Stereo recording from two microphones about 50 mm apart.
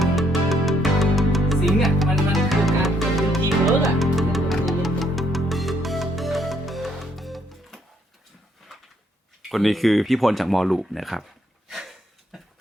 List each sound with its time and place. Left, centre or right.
0.0 s music: centre
9.5 s speech: centre
11.7 s a sound: centre